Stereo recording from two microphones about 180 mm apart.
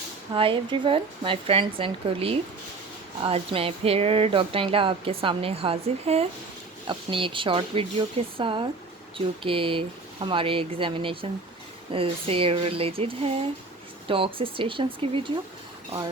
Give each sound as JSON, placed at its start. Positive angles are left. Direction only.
{"t": 0.3, "sound": "speech", "side_deg": -30}